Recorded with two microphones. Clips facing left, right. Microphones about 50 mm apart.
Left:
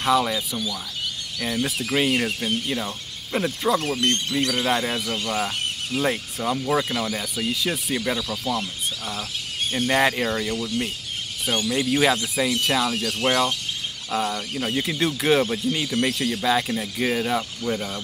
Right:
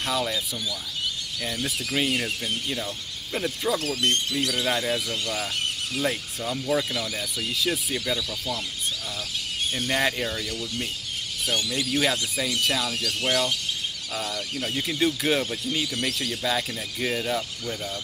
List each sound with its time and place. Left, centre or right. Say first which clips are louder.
0.0 s speech: left 6 dB; centre
1.4 s speech: left 5 dB; centre
3.3 s speech: left 4 dB; centre
3.7 s speech: left 4 dB; left
4.0 s speech: left 2 dB; left
4.7 s speech: left 2 dB; centre
7.3 s speech: even; centre
7.9 s speech: left 3 dB; left
9.7 s speech: left 5 dB; centre
12.0 s speech: left 3 dB; centre
15.0 s speech: left 3 dB; centre
15.7 s speech: left 4 dB; centre